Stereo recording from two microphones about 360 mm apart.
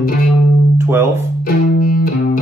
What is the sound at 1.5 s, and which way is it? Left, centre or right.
Music, left.